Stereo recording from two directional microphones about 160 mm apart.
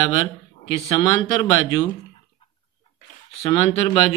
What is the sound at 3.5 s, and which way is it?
Speech, 35° left (ahead or behind).